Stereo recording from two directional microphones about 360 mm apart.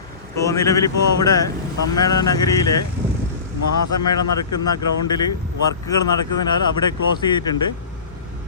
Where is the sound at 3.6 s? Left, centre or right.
Left.